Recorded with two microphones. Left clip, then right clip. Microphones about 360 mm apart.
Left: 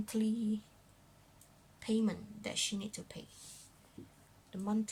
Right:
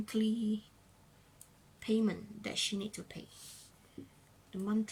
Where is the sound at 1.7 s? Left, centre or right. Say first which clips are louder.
Right 2 dB; centre.